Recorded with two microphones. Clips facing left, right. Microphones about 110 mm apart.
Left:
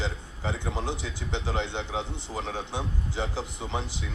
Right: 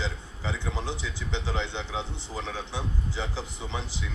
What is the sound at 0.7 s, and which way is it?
Speech, 15° left (ahead or behind).